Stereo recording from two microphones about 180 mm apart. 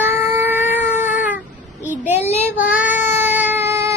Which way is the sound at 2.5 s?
10° right (ahead or behind).